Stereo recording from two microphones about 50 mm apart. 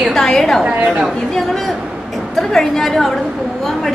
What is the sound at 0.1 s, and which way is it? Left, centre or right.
A woman's voice, centre.